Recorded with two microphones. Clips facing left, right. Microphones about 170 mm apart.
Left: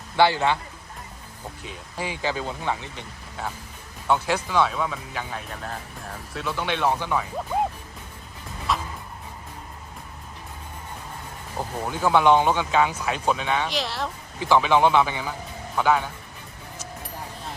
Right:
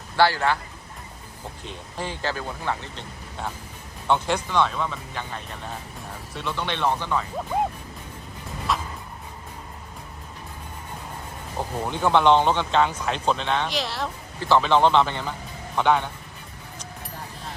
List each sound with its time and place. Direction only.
0.2 s a man's voice: 20° left (ahead or behind)
1.6 s speech: 10° left (ahead or behind)
4.1 s speech: 5° left (ahead or behind)
8.7 s vehicle: centre (ahead or behind)
11.9 s speech: 5° left (ahead or behind)
14.3 s a man's voice: 15° left (ahead or behind)